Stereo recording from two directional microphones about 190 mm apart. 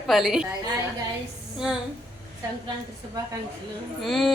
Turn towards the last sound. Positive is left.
turn(degrees=0)  # may be behind; listen again after turning